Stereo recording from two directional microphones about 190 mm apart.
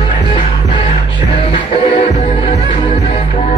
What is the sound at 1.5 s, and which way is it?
Music, 35° left (ahead or behind).